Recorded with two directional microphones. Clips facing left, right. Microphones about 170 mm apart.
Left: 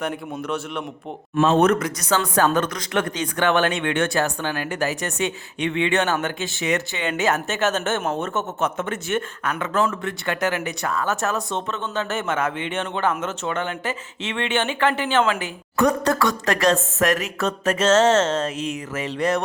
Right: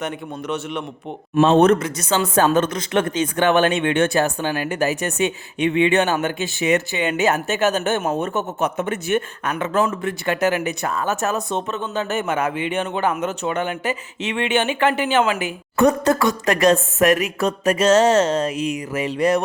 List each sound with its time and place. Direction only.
0.0 s a man's voice: centre (ahead or behind)
1.4 s speech: 30° right (ahead or behind); by 15.5 s 15° right (ahead or behind)
15.8 s speech: 25° right (ahead or behind)